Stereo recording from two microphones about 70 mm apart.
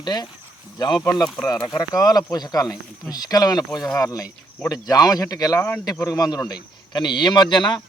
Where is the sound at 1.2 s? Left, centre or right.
Centre.